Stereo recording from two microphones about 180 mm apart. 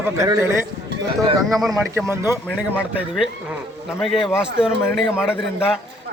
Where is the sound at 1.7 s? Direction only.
15° right (ahead or behind).